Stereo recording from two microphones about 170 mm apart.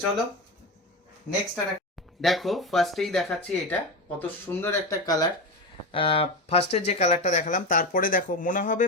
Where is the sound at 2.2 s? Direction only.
Centre (ahead or behind); by 5.3 s 20° left (ahead or behind).